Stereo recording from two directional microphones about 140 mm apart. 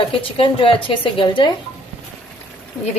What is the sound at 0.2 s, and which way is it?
A woman's voice, 40° left (ahead or behind).